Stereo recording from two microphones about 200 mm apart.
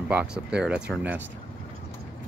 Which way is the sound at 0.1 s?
5° right (ahead or behind).